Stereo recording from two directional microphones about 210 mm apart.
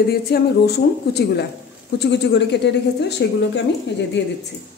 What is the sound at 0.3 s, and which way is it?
A woman's voice, 50° left (ahead or behind).